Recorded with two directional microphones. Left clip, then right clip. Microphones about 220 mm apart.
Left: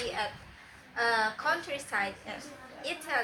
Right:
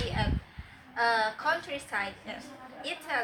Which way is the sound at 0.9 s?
10° left (ahead or behind).